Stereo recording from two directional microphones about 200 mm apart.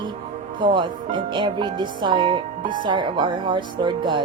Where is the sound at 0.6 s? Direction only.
25° right (ahead or behind).